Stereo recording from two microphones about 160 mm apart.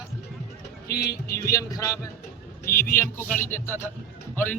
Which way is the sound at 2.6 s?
65° left (ahead or behind).